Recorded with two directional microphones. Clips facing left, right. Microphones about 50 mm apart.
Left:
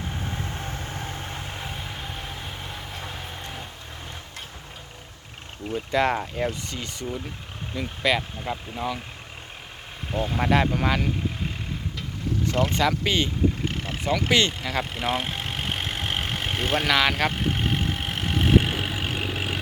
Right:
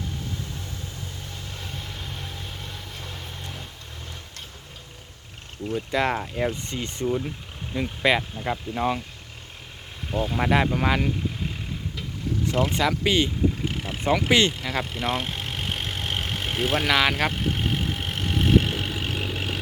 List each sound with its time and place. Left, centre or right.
0.1 s vehicle: left
1.6 s vehicle: centre
5.9 s speech: centre
7.0 s speech: centre
10.1 s speech: centre
12.5 s vehicle: centre